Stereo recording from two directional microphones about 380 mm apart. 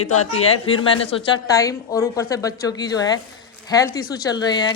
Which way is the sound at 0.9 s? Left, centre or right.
Centre.